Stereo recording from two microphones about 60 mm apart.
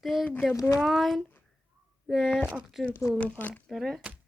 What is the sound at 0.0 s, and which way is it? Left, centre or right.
Speech, centre.